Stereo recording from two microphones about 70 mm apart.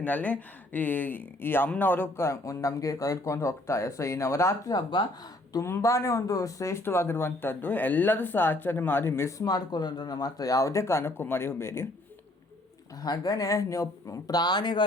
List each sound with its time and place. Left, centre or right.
0.0 s a man's voice: left
4.7 s speech: left
5.6 s a man's voice: left
6.8 s speech: left
9.4 s a man's voice: left
13.0 s a man's voice: left
14.3 s speech: left